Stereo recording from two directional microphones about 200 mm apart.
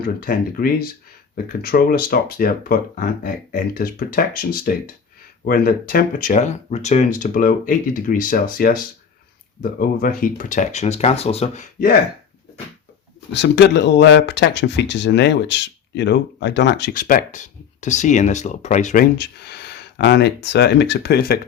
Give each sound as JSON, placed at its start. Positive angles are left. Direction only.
{"t": 0.0, "sound": "speech", "side_deg": 45}
{"t": 13.3, "sound": "speech", "side_deg": 60}
{"t": 17.0, "sound": "speech", "side_deg": 45}
{"t": 19.1, "sound": "speech", "side_deg": 55}